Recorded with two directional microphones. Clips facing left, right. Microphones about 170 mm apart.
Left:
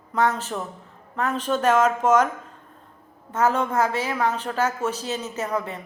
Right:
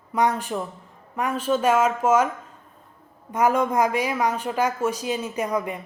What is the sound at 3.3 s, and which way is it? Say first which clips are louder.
A woman's voice: right 1 dB; 15° right (ahead or behind).